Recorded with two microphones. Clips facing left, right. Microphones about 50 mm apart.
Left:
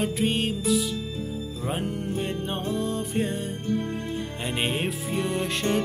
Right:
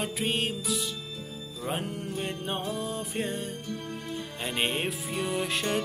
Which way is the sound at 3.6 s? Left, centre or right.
Left.